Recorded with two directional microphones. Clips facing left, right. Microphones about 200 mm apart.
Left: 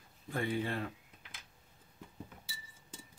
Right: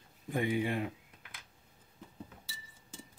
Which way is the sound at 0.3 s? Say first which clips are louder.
Right 3 dB; 15° right (ahead or behind).